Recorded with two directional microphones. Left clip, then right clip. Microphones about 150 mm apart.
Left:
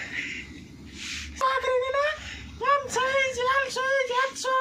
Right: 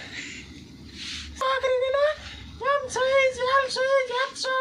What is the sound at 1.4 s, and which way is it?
Beatboxing, 20° right (ahead or behind).